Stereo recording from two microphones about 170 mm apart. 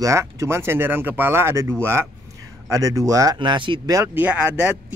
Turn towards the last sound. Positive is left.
turn(degrees=-10)  # may be behind; listen again after turning